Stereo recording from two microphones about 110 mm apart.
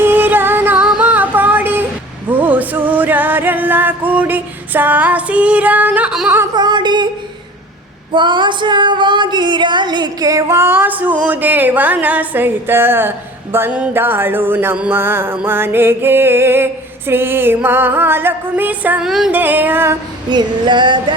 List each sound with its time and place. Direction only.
0.0 s music: 20° right (ahead or behind)
0.9 s female singing: 10° right (ahead or behind)
2.3 s music: 15° right (ahead or behind)
6.1 s singing: 5° right (ahead or behind)
6.5 s a sound: 40° right (ahead or behind)
8.1 s female singing: 45° right (ahead or behind); by 19.0 s 15° right (ahead or behind)
19.0 s female singing: centre (ahead or behind)
19.3 s music: 15° right (ahead or behind)
20.3 s female singing: 45° right (ahead or behind)